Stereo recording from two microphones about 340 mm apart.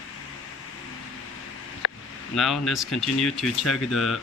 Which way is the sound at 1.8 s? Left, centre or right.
Left.